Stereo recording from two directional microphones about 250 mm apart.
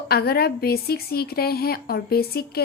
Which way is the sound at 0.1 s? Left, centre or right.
Left.